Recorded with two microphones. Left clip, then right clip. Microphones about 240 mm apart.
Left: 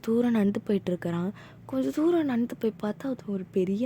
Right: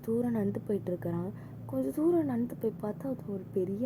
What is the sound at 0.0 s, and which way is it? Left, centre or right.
Speech, left.